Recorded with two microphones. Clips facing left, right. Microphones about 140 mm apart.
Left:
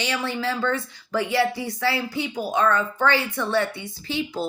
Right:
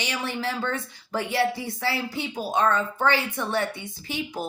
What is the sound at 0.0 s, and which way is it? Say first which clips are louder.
Speech: left 3 dB; 20° right (ahead or behind).